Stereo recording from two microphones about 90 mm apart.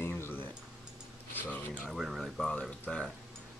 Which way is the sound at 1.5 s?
20° left (ahead or behind).